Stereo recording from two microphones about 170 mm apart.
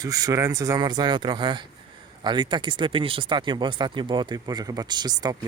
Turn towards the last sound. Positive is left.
turn(degrees=-25)  # may be behind; listen again after turning